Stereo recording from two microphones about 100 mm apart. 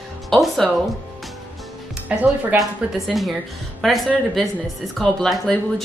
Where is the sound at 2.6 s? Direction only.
Centre (ahead or behind).